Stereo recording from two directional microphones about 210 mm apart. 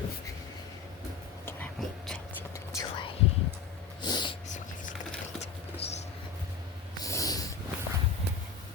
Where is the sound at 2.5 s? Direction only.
20° left (ahead or behind).